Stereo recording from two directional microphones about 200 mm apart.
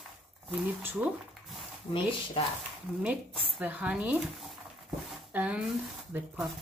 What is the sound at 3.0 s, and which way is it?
Speech, 5° right (ahead or behind).